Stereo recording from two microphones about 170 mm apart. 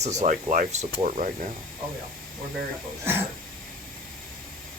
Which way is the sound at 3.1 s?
15° right (ahead or behind).